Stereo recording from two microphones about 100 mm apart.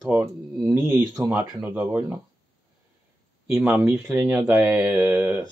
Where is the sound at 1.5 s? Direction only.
15° right (ahead or behind).